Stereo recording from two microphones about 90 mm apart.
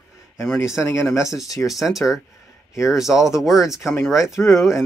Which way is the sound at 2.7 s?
35° left (ahead or behind).